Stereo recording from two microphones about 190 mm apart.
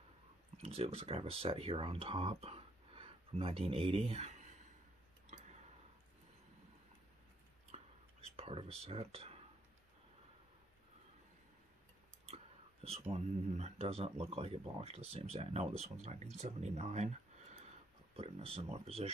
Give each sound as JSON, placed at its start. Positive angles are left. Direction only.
{"t": 0.6, "sound": "speech", "side_deg": -30}
{"t": 7.7, "sound": "whispering", "side_deg": -30}
{"t": 13.1, "sound": "speech", "side_deg": -35}